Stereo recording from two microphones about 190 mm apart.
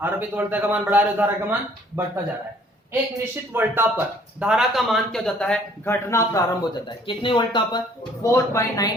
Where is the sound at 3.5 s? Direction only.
10° right (ahead or behind); by 8.9 s 15° left (ahead or behind).